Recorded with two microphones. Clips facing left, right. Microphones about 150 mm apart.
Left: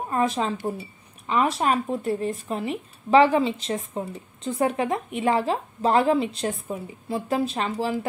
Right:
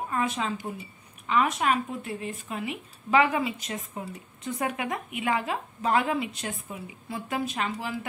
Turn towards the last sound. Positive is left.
turn(degrees=30)  # may be behind; listen again after turning